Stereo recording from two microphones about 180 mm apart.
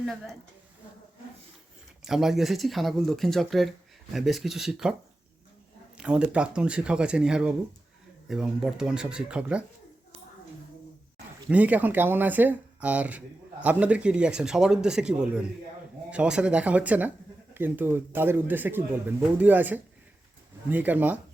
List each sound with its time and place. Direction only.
2.0 s speech: centre (ahead or behind)
6.0 s speech: 5° right (ahead or behind)
11.4 s speech: 10° right (ahead or behind)